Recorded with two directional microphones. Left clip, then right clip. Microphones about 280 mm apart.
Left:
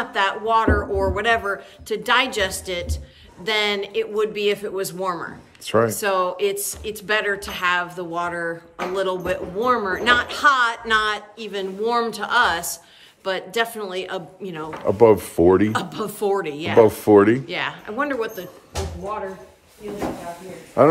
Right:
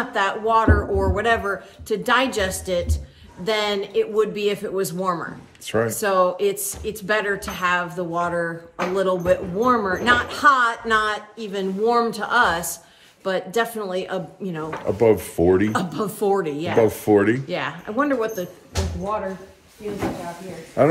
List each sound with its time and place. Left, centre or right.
0.1 s speech: centre
14.9 s speech: left
15.7 s speech: centre
16.8 s speech: left
17.5 s speech: centre
20.8 s speech: left